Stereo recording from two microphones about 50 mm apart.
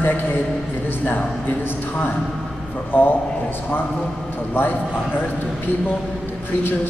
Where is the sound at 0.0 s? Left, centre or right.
Left.